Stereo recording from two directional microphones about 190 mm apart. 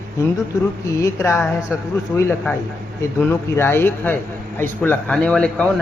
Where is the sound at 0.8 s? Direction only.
15° left (ahead or behind).